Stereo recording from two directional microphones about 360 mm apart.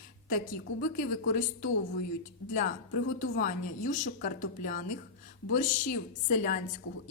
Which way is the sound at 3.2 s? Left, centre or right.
Left.